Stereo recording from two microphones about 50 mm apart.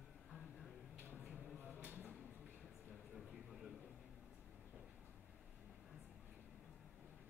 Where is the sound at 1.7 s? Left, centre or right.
Right.